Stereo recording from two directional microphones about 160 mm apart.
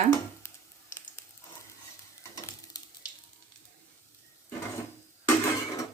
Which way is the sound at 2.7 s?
25° left (ahead or behind).